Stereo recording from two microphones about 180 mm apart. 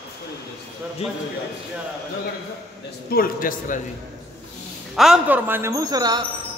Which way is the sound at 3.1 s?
50° left (ahead or behind).